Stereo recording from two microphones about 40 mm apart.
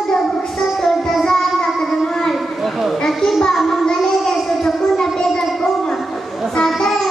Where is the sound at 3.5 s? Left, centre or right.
Centre.